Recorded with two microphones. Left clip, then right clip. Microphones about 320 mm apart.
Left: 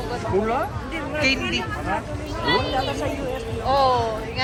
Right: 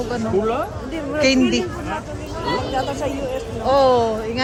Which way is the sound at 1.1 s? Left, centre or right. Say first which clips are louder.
Right 5 dB; right.